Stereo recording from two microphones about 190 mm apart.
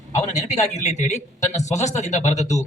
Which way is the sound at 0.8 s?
40° left (ahead or behind).